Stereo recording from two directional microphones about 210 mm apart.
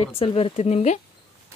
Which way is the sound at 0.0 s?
25° left (ahead or behind).